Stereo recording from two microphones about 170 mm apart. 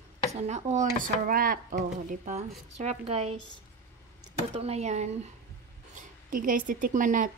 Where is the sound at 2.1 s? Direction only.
40° right (ahead or behind).